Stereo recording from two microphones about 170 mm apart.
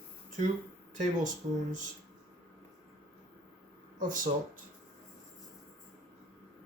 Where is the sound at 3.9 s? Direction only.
50° right (ahead or behind).